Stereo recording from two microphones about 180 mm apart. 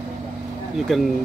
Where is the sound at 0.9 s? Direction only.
Centre (ahead or behind).